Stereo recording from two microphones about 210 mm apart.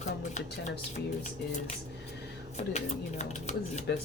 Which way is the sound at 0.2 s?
35° left (ahead or behind).